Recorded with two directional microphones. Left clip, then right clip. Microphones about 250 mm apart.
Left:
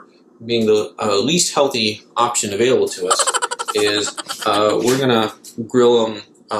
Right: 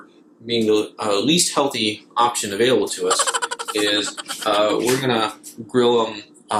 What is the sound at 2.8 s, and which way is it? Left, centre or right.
Speech, centre.